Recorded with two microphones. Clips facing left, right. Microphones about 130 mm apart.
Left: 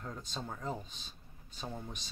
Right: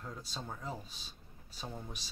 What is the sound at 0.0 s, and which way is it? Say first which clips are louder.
Speech: left 2 dB; 5° right (ahead or behind).